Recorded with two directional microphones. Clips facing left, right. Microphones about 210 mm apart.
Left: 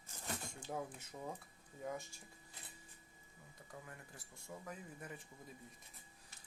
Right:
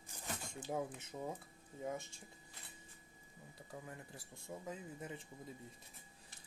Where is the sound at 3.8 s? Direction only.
25° right (ahead or behind).